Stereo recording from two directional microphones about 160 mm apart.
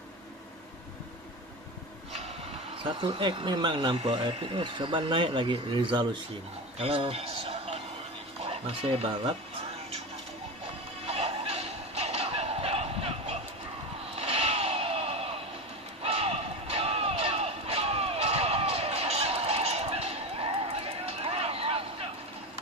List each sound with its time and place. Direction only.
2.8 s speech: 30° right (ahead or behind)
4.0 s a man's voice: 40° right (ahead or behind)
11.1 s a sound: 40° right (ahead or behind)